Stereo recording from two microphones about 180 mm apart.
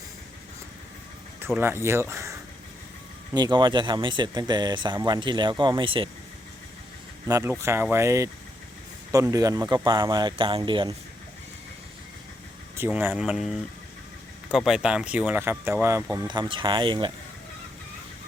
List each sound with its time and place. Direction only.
1.5 s speech: 15° right (ahead or behind)
3.3 s speech: 25° right (ahead or behind)
7.3 s speech: 15° right (ahead or behind)
12.7 s speech: 10° right (ahead or behind)